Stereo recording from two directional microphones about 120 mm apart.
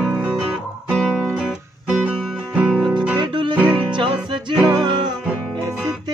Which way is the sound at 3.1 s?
40° right (ahead or behind).